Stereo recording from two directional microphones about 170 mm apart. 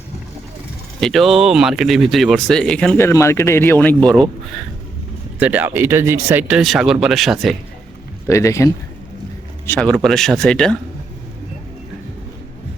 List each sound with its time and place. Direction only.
1.0 s speech: centre (ahead or behind)
3.0 s speech: 15° left (ahead or behind)
5.4 s speech: 10° right (ahead or behind)
8.3 s speech: 15° left (ahead or behind)